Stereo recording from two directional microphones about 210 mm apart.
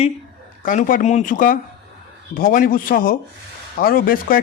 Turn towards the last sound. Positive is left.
turn(degrees=45)  # may be behind; listen again after turning